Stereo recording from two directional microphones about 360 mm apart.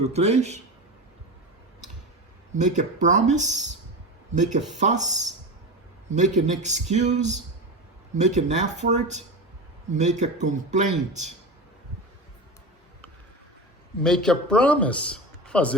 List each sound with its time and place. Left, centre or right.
0.0 s speech: centre
2.6 s speech: centre
6.1 s speech: centre
8.4 s speech: centre
14.0 s a man's voice: centre